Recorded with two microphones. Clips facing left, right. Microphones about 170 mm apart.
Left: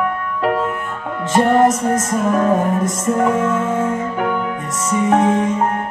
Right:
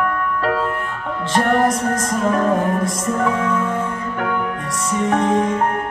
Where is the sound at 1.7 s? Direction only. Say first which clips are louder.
Left 2 dB; 5° left (ahead or behind).